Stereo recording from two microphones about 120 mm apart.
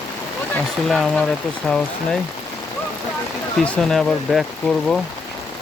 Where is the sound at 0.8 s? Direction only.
Centre (ahead or behind).